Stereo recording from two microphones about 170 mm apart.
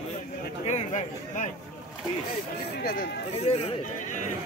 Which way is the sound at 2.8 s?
60° left (ahead or behind).